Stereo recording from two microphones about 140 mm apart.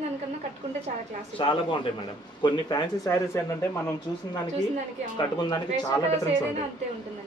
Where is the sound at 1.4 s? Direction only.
40° left (ahead or behind).